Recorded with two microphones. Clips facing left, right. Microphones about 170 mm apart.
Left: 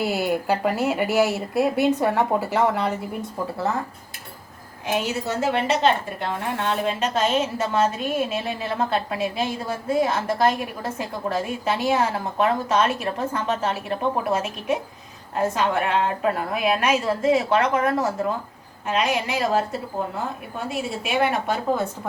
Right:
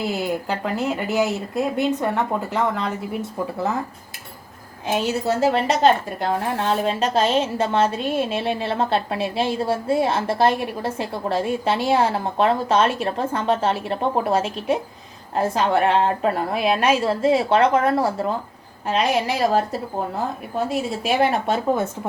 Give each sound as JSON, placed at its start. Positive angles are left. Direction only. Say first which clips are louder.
{"t": 0.0, "sound": "speech", "louder": "left 1 dB", "side_deg": 5}
{"t": 4.9, "sound": "a woman's voice", "louder": "right 4 dB", "side_deg": -35}
{"t": 21.0, "sound": "speech", "louder": "right 2 dB", "side_deg": -35}